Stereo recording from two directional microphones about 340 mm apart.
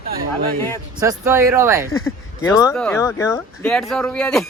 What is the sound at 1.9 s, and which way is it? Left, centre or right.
Speech, left.